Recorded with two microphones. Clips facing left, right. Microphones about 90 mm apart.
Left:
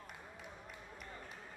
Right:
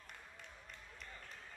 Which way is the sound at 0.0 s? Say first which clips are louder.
Left 4 dB; 10° left (ahead or behind).